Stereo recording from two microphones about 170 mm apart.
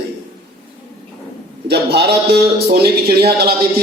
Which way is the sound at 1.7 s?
70° right (ahead or behind).